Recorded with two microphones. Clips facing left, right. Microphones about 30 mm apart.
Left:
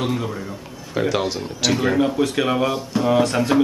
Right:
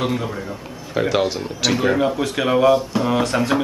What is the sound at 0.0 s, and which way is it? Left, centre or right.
Speech, centre.